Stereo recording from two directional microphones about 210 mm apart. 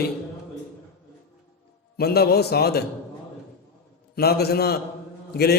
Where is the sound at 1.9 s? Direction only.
50° left (ahead or behind).